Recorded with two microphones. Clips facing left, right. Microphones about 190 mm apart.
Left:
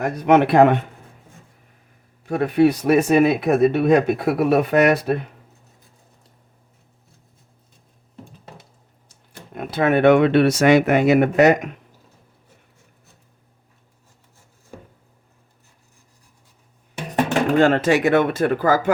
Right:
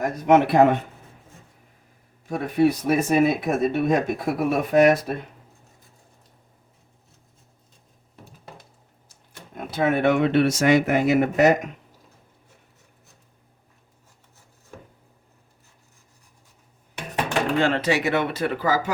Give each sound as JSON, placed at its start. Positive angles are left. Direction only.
{"t": 0.0, "sound": "speech", "side_deg": 65}
{"t": 2.2, "sound": "speech", "side_deg": 70}
{"t": 9.6, "sound": "speech", "side_deg": 65}
{"t": 17.6, "sound": "speech", "side_deg": 50}